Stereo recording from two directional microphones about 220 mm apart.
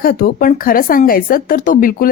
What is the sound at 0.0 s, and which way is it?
Speech, 40° left (ahead or behind).